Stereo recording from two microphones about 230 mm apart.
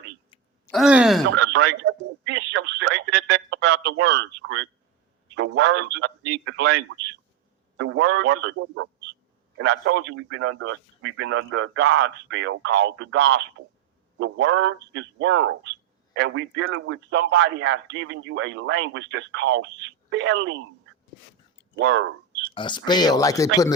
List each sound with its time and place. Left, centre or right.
0.6 s speech: centre
1.3 s a man's voice: right
21.8 s speech: right
22.5 s speech: centre